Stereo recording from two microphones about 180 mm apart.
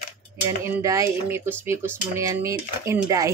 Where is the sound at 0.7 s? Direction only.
15° right (ahead or behind).